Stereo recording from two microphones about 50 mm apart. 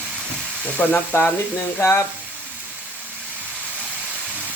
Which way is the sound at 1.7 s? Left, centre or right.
Left.